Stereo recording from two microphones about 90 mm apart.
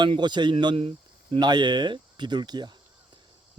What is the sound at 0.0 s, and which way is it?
Speech, 60° right (ahead or behind).